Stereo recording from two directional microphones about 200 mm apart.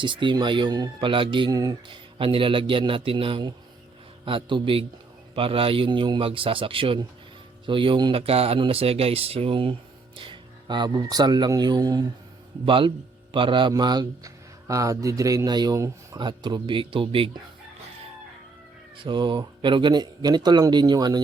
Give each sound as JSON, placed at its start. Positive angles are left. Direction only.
{"t": 0.0, "sound": "speech", "side_deg": -25}
{"t": 18.9, "sound": "speech", "side_deg": -25}